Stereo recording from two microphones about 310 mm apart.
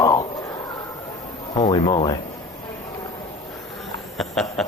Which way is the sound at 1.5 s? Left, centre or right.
Centre.